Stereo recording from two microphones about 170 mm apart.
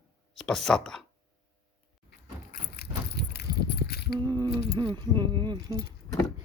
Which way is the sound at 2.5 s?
65° left (ahead or behind).